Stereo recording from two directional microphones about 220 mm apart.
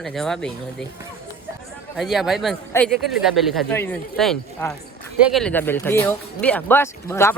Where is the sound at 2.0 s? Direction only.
Centre (ahead or behind).